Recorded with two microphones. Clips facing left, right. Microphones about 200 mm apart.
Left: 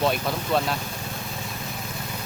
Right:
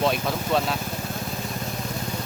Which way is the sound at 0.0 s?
Centre (ahead or behind).